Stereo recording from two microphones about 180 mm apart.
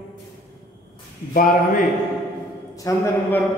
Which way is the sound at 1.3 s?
50° left (ahead or behind).